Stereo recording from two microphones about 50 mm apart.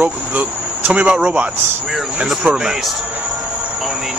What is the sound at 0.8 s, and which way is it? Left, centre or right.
A man's voice, right.